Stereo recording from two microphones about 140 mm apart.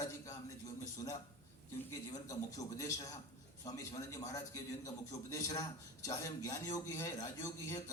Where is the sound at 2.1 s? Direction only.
25° left (ahead or behind).